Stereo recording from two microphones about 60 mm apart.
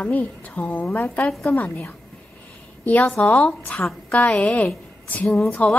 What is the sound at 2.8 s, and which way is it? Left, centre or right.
A woman's voice, left.